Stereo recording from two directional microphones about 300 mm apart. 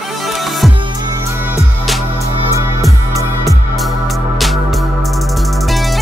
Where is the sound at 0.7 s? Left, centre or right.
Centre.